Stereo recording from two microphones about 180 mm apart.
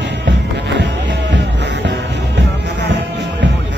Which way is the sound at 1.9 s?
70° right (ahead or behind).